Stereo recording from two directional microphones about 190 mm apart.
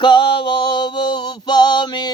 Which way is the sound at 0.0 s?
25° left (ahead or behind).